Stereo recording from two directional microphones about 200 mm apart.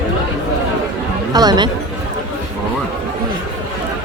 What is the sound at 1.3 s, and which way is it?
Speech, 20° right (ahead or behind).